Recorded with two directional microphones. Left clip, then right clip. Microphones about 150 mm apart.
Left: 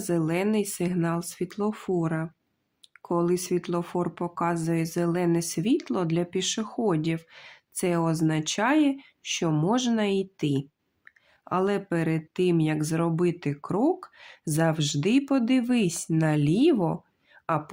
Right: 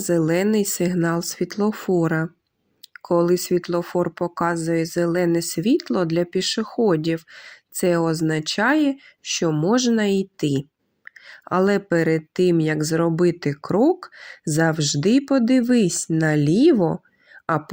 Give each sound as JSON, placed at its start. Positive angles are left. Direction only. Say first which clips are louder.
{"t": 0.0, "sound": "speech", "louder": "right 7 dB", "side_deg": -35}